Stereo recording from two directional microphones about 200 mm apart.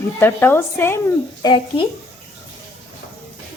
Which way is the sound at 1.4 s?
25° left (ahead or behind).